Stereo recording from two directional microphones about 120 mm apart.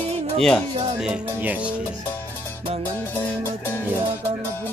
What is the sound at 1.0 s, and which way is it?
Speech, 10° right (ahead or behind).